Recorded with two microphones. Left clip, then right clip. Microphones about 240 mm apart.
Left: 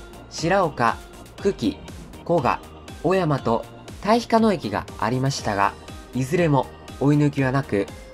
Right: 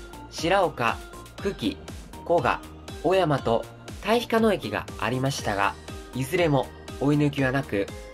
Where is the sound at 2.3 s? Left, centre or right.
Left.